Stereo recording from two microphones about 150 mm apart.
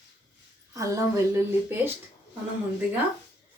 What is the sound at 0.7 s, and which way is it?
Speech, 20° right (ahead or behind).